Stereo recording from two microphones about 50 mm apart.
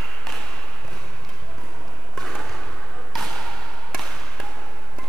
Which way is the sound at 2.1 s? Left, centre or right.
Centre.